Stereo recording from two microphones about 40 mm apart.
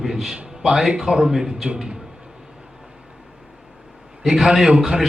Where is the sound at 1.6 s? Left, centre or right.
Right.